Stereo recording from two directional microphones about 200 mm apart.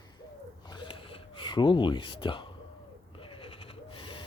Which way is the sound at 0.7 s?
25° left (ahead or behind).